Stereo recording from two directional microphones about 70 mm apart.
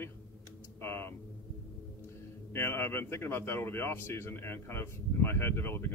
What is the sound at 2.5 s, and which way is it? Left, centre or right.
A man's voice, left.